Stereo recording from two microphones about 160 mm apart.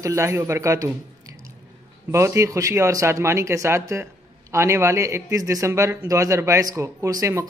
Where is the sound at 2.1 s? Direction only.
15° right (ahead or behind).